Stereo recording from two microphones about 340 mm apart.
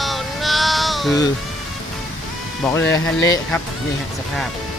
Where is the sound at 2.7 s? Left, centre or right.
Centre.